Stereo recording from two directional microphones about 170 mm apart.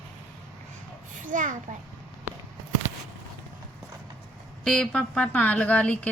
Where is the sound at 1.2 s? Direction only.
50° right (ahead or behind).